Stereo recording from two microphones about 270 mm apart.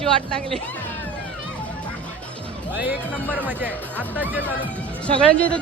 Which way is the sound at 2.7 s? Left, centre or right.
Centre.